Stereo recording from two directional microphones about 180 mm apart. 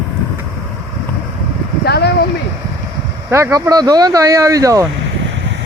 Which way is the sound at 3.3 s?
15° right (ahead or behind).